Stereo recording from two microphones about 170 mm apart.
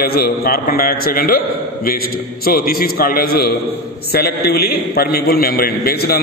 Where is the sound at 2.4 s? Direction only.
60° left (ahead or behind).